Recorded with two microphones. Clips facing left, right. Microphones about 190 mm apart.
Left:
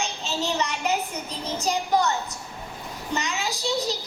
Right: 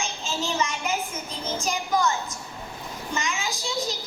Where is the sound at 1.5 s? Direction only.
35° left (ahead or behind).